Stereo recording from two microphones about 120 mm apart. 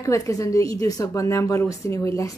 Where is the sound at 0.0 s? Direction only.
25° left (ahead or behind).